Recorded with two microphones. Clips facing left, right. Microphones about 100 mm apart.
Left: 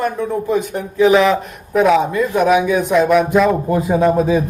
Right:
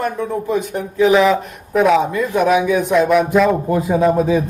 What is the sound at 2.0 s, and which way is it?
Speech, 20° left (ahead or behind).